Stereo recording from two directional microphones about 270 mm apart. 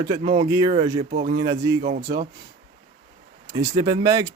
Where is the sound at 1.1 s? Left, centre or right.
Right.